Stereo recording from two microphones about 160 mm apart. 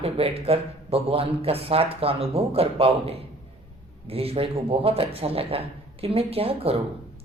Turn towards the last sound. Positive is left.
turn(degrees=-35)  # may be behind; listen again after turning